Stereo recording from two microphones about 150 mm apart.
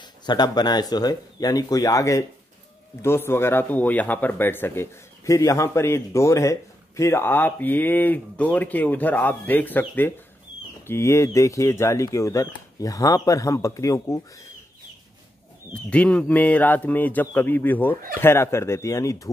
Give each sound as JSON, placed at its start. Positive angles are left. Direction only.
{"t": 0.0, "sound": "speech", "side_deg": 30}
{"t": 15.7, "sound": "speech", "side_deg": 10}